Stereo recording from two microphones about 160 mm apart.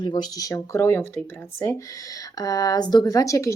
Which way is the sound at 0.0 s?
25° left (ahead or behind).